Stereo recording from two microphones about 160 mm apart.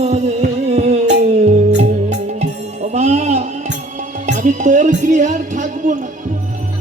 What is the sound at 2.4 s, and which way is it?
Music, 45° right (ahead or behind).